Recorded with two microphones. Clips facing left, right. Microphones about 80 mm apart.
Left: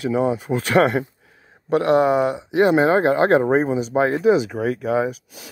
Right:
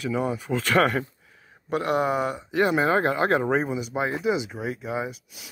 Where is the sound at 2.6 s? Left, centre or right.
Left.